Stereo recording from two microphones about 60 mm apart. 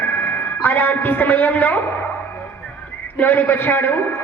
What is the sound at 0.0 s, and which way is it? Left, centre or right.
A man's voice, left.